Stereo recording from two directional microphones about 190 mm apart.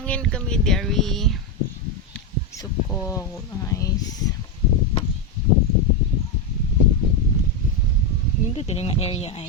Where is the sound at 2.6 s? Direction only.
15° left (ahead or behind).